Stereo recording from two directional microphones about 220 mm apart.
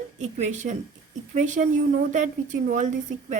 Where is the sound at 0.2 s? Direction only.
35° right (ahead or behind).